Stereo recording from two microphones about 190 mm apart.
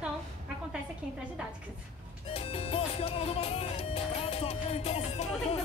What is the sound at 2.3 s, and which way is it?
Music, 30° left (ahead or behind).